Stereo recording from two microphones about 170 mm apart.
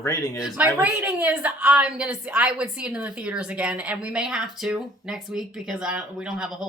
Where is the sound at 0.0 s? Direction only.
20° left (ahead or behind).